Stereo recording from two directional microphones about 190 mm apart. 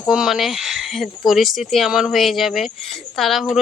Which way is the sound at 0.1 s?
Centre (ahead or behind).